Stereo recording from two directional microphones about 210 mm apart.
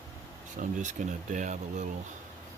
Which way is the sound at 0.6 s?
35° right (ahead or behind).